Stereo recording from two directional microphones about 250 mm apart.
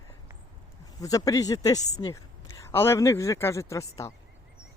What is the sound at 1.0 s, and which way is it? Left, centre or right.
Speech, centre.